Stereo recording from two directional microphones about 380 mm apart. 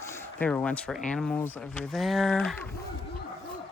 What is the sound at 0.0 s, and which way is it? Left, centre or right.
Speech, centre.